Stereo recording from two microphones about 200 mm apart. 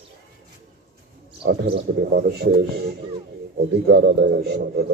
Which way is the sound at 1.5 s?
55° right (ahead or behind).